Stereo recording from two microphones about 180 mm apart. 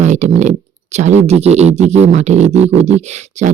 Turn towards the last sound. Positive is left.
turn(degrees=-40)  # may be behind; listen again after turning